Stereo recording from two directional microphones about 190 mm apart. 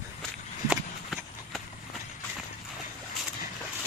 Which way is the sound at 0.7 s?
Centre (ahead or behind).